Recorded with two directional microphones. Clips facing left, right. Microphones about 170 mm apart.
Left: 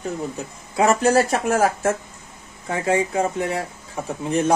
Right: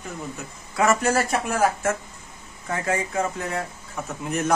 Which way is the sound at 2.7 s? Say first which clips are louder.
Left 5 dB; 30° left (ahead or behind).